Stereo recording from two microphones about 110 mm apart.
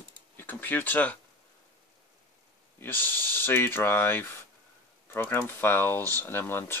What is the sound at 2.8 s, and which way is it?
Speech, 20° left (ahead or behind).